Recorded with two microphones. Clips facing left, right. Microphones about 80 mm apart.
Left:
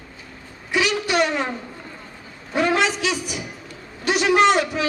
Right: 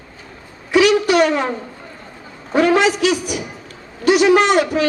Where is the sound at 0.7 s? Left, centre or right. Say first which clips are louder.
Right 8 dB; right.